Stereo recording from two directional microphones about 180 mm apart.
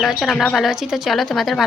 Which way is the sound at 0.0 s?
Centre (ahead or behind).